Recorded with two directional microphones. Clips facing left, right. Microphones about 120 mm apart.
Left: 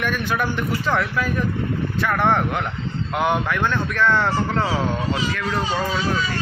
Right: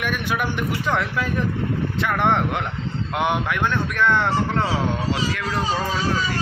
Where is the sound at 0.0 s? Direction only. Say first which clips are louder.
Left 1 dB; 15° right (ahead or behind).